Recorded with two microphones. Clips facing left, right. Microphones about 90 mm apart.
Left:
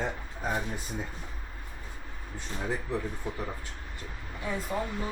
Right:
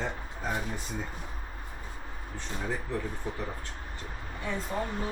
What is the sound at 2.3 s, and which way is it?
Speech, 10° left (ahead or behind).